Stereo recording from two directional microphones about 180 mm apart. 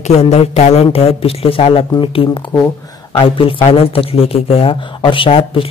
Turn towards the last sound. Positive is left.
turn(degrees=30)  # may be behind; listen again after turning